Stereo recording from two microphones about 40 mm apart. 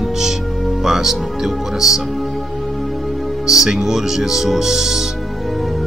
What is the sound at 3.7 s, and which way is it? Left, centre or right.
Speech, centre.